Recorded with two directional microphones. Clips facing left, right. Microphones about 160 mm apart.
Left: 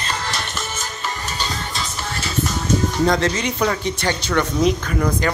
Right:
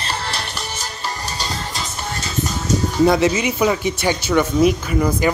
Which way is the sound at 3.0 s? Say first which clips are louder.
Right 8 dB; 10° right (ahead or behind).